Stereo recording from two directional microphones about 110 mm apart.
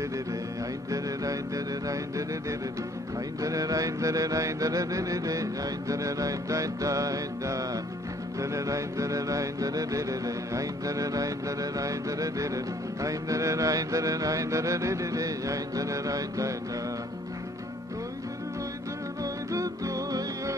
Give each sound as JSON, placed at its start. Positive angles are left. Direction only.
{"t": 0.8, "sound": "mantra", "side_deg": -30}
{"t": 3.3, "sound": "mantra", "side_deg": -30}
{"t": 19.2, "sound": "music", "side_deg": -30}